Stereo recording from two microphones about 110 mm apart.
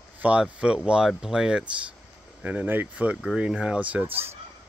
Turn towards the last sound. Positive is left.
turn(degrees=-15)  # may be behind; listen again after turning